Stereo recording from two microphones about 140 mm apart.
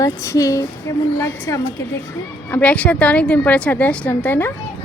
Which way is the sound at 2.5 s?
10° left (ahead or behind).